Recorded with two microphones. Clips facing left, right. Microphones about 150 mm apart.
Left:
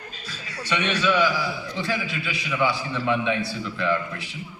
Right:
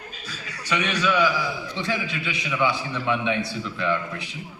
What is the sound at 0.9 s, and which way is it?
Speech, centre (ahead or behind).